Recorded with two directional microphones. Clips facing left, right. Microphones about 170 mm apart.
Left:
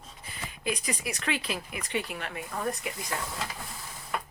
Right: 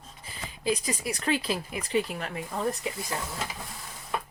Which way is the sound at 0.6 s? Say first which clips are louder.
Right 4 dB; 30° right (ahead or behind).